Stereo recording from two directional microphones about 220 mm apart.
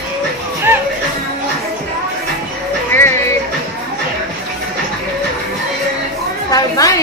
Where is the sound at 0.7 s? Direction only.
10° right (ahead or behind).